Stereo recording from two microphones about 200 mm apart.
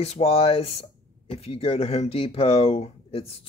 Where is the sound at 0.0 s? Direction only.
30° left (ahead or behind).